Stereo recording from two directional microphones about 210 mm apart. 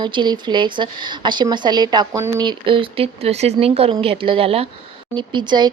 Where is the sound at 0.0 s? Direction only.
20° right (ahead or behind).